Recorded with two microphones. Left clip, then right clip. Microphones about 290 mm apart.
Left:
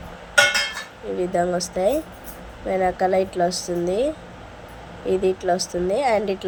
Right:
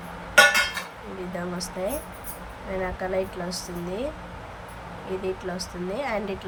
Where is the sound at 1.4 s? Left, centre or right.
Centre.